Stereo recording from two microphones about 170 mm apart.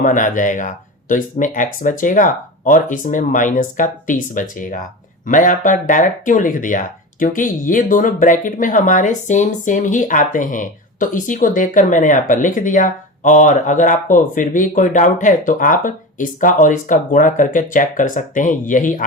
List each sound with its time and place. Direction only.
0.0 s speech: 50° left (ahead or behind)